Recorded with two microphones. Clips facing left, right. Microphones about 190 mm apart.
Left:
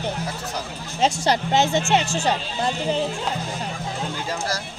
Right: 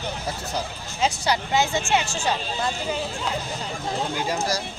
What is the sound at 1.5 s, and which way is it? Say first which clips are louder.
Speech: left 2 dB; 25° left (ahead or behind).